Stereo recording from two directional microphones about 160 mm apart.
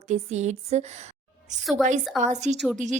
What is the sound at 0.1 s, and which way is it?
Speech, 45° right (ahead or behind).